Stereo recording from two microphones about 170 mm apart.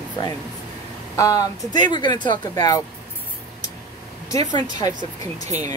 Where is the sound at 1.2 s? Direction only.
20° left (ahead or behind).